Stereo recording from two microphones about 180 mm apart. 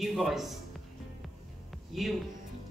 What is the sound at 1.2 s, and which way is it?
Music, centre (ahead or behind).